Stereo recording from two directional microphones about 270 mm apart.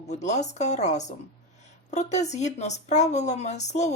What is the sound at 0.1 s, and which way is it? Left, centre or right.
Speech, left.